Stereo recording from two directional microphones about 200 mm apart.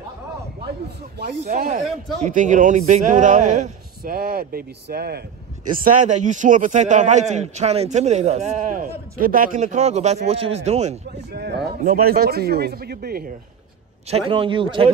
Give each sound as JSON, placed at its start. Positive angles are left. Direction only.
{"t": 1.4, "sound": "a man's voice", "side_deg": -45}
{"t": 5.9, "sound": "a man's voice", "side_deg": -40}
{"t": 11.3, "sound": "speech", "side_deg": -55}
{"t": 14.1, "sound": "a man's voice", "side_deg": -25}